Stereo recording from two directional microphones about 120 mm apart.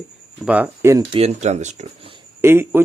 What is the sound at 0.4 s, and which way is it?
Speech, 15° right (ahead or behind).